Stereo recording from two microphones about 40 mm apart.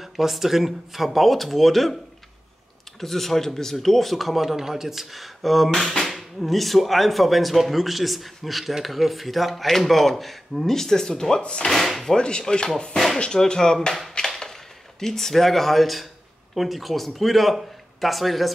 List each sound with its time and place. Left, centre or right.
0.0 s speech: centre
3.0 s speech: centre; by 11.7 s left
11.7 s speech: centre
12.2 s chopping: left
13.4 s speech: centre